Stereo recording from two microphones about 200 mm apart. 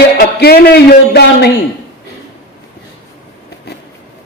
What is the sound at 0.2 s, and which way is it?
A man's voice, 50° left (ahead or behind).